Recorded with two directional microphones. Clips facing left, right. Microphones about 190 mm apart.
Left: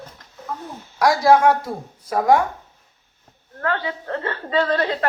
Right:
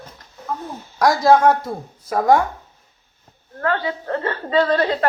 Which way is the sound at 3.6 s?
40° right (ahead or behind).